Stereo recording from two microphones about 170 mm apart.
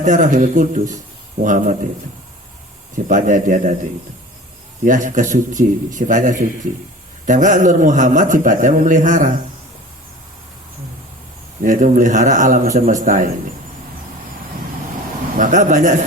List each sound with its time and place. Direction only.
0.0 s a man's voice: 50° right (ahead or behind)
2.9 s a man's voice: 50° right (ahead or behind)
4.9 s a man's voice: 50° right (ahead or behind)
11.6 s a man's voice: 50° right (ahead or behind)
15.4 s a man's voice: 50° right (ahead or behind)